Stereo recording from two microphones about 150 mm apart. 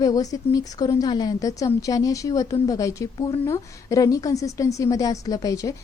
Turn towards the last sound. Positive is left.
turn(degrees=25)  # may be behind; listen again after turning